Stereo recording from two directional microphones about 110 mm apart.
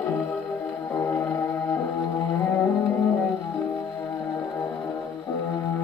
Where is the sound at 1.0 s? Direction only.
25° left (ahead or behind).